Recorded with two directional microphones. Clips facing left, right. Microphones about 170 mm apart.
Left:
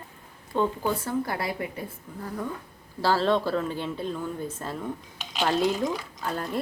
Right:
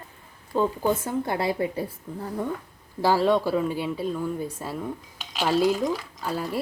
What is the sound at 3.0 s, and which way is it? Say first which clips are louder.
Speech: right 2 dB; 15° right (ahead or behind).